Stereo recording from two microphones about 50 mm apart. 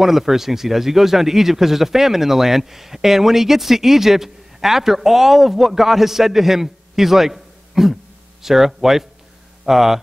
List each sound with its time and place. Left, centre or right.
0.0 s speech: centre